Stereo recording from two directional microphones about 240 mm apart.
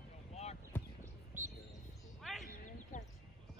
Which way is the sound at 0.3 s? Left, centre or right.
Left.